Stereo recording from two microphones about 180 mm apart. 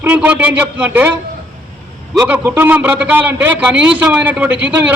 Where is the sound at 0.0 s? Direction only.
10° right (ahead or behind).